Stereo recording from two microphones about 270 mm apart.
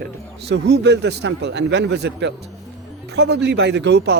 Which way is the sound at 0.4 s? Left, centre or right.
Right.